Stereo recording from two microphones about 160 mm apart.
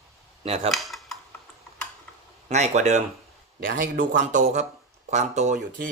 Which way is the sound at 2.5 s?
45° right (ahead or behind).